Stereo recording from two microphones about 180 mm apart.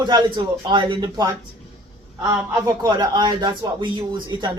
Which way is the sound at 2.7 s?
20° right (ahead or behind).